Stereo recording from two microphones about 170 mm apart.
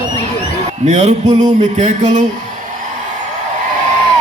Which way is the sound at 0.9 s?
45° right (ahead or behind).